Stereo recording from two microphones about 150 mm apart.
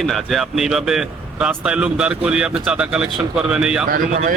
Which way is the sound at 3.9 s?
60° right (ahead or behind).